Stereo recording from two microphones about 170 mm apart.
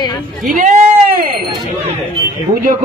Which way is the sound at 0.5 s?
50° right (ahead or behind).